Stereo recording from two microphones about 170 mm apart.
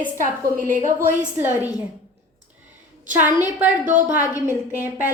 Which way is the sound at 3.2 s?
10° right (ahead or behind).